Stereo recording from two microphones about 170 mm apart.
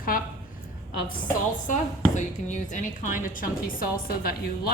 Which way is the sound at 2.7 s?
50° left (ahead or behind).